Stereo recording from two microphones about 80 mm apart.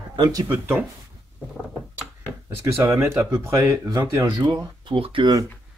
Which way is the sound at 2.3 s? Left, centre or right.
Right.